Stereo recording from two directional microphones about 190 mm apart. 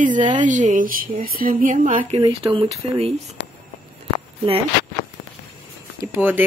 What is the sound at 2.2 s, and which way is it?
Speech, 25° right (ahead or behind).